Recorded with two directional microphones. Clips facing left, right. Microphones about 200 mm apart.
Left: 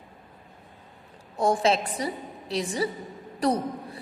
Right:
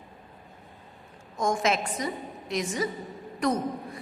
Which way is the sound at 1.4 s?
35° left (ahead or behind).